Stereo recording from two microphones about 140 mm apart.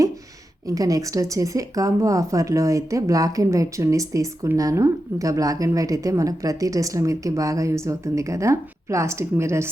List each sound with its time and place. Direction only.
0.7 s speech: 25° right (ahead or behind)